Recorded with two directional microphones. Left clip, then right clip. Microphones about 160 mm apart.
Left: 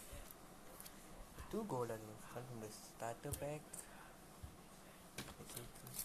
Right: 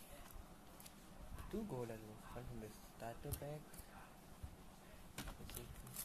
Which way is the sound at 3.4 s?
5° left (ahead or behind).